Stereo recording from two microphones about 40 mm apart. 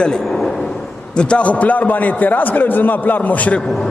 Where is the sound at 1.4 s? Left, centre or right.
Left.